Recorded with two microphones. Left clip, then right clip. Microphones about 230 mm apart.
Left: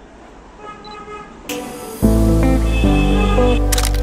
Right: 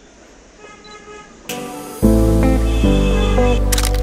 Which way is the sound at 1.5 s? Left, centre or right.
Centre.